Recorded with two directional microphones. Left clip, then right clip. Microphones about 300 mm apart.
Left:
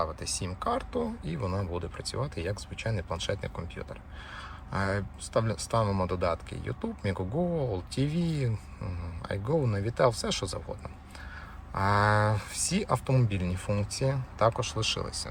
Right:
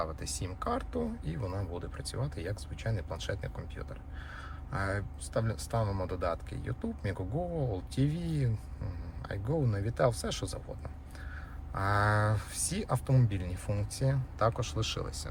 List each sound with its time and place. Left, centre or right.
0.0 s speech: centre
11.7 s speech: centre